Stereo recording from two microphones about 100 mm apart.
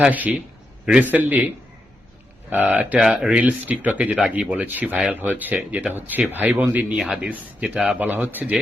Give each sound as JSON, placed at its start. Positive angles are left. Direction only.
{"t": 0.0, "sound": "speech", "side_deg": -15}
{"t": 2.5, "sound": "speech", "side_deg": -15}
{"t": 3.0, "sound": "speech", "side_deg": -5}